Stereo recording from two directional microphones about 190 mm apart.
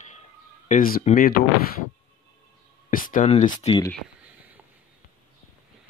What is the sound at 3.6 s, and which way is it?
Speech, 25° left (ahead or behind).